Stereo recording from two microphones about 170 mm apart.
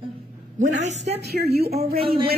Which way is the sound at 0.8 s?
40° right (ahead or behind).